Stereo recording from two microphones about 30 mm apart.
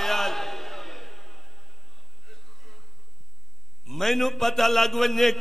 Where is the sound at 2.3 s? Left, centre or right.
Centre.